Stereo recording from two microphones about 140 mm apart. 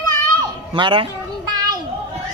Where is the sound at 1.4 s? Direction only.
30° right (ahead or behind).